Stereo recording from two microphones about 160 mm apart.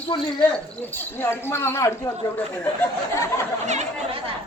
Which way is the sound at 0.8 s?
15° left (ahead or behind).